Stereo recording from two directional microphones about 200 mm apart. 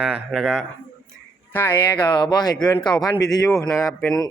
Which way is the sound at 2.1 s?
20° left (ahead or behind).